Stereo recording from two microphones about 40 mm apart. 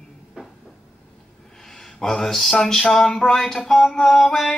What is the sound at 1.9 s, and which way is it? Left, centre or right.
Music, centre.